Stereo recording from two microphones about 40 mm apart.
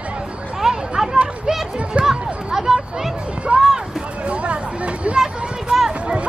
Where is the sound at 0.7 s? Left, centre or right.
Centre.